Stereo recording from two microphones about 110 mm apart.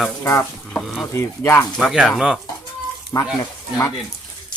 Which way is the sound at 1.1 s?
20° left (ahead or behind).